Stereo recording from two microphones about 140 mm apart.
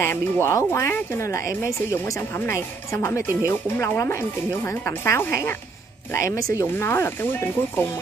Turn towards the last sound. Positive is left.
turn(degrees=15)  # may be behind; listen again after turning